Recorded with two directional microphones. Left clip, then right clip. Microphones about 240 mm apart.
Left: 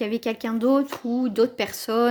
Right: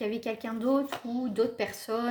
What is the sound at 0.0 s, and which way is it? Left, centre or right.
Speech, left.